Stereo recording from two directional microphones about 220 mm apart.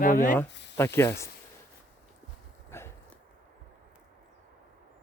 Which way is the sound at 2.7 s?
10° left (ahead or behind).